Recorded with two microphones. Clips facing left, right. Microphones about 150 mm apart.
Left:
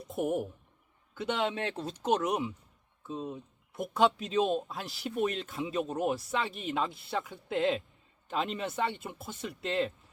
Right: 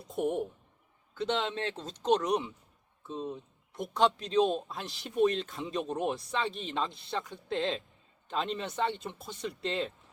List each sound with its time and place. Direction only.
0.2 s speech: 5° left (ahead or behind)